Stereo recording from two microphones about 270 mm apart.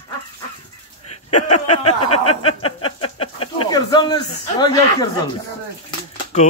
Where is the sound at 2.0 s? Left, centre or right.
Left.